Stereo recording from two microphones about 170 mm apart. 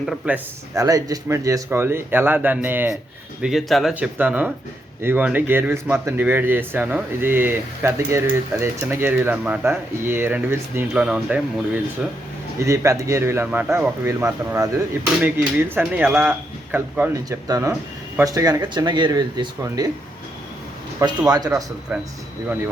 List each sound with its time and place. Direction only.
0.0 s speech: centre (ahead or behind)
0.7 s speech: 20° right (ahead or behind)
3.4 s speech: centre (ahead or behind)
12.5 s speech: 15° right (ahead or behind)
21.2 s speech: 25° right (ahead or behind)